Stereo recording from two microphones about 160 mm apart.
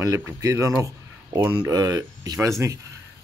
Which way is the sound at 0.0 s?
20° right (ahead or behind).